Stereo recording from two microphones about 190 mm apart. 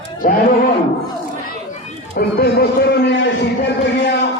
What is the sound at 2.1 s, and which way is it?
A man's voice, 55° left (ahead or behind).